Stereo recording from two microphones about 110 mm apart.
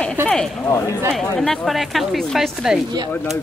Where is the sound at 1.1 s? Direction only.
5° left (ahead or behind).